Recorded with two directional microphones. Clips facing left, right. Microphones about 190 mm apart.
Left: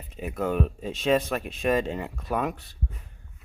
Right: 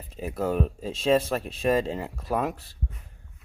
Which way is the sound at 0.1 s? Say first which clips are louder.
Even; 30° right (ahead or behind).